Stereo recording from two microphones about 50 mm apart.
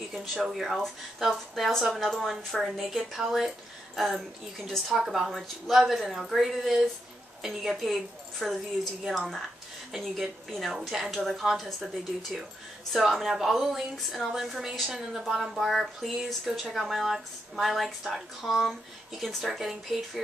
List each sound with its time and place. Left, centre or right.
0.1 s speech: centre
9.9 s speech: centre